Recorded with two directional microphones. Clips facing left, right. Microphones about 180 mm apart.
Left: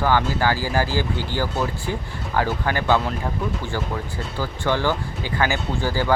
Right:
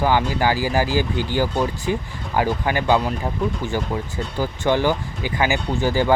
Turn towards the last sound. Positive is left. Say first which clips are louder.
# right 3 dB
turn(degrees=-20)  # may be behind; listen again after turning